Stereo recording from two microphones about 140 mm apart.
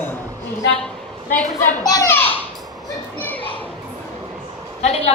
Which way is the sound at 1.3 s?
60° left (ahead or behind).